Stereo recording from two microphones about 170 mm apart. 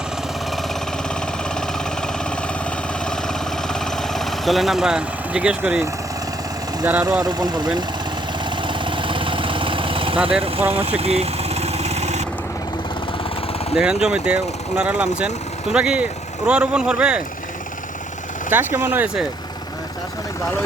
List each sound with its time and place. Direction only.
1.5 s vehicle: 5° left (ahead or behind)
7.0 s speech: 20° right (ahead or behind)
8.4 s vehicle: 30° right (ahead or behind)
13.7 s speech: 5° right (ahead or behind)
18.5 s speech: 10° right (ahead or behind)